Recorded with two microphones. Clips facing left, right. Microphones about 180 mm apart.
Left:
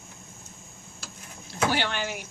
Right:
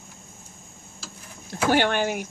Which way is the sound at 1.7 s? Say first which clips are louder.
Right 7 dB; 50° right (ahead or behind).